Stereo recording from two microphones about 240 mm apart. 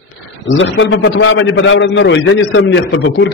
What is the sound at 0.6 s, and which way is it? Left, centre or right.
A man's voice, left.